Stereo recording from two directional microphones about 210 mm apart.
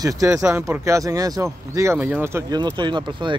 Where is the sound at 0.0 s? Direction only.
15° right (ahead or behind).